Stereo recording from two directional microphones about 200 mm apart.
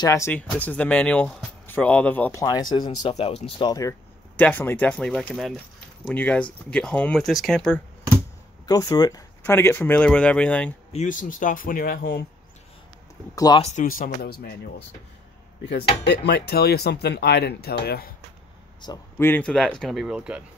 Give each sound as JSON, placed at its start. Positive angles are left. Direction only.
{"t": 0.0, "sound": "speech", "side_deg": 15}
{"t": 4.4, "sound": "speech", "side_deg": 10}
{"t": 8.6, "sound": "speech", "side_deg": 20}
{"t": 10.9, "sound": "speech", "side_deg": 40}
{"t": 13.6, "sound": "speech", "side_deg": 35}
{"t": 16.1, "sound": "speech", "side_deg": 55}
{"t": 18.8, "sound": "speech", "side_deg": 20}
{"t": 19.2, "sound": "speech", "side_deg": 5}